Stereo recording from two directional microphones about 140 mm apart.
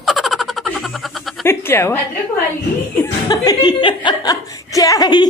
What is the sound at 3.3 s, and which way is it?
Speech, 30° left (ahead or behind).